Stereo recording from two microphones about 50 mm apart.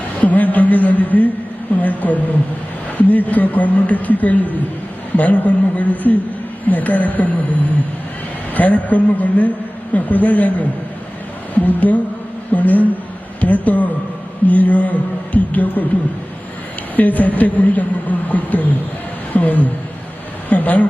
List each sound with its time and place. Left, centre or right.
0.2 s a sound: left
3.0 s a woman's voice: left
16.9 s a woman's voice: left